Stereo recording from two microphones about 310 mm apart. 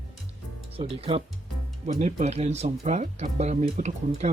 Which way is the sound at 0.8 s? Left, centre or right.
Centre.